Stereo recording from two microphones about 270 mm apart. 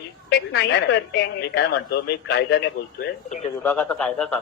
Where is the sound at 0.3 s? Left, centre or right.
Left.